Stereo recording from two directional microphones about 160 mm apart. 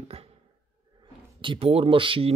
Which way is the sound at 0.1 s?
40° right (ahead or behind).